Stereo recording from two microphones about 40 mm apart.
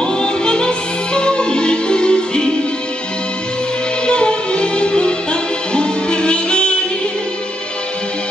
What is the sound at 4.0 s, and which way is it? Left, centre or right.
Music, left.